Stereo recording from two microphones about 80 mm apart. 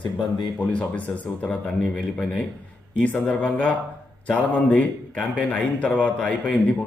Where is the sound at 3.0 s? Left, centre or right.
Centre.